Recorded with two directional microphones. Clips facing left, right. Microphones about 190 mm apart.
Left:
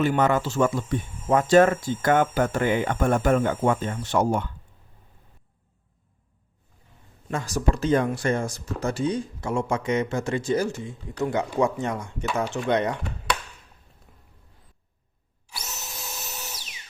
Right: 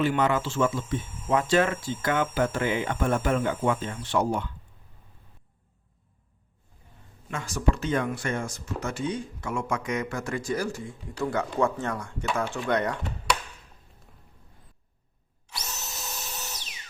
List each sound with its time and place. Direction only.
0.0 s speech: 45° left (ahead or behind)
7.3 s speech: 35° left (ahead or behind); by 13.0 s 20° left (ahead or behind)
15.5 s drill: centre (ahead or behind)